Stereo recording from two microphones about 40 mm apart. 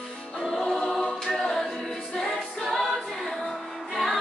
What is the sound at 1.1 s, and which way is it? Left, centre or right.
Choir, centre.